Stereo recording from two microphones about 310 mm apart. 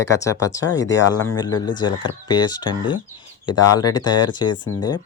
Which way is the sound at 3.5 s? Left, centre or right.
Left.